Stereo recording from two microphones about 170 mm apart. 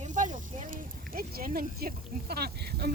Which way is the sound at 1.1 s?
55° right (ahead or behind).